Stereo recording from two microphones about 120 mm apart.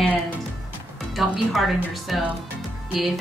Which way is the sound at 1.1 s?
Centre (ahead or behind).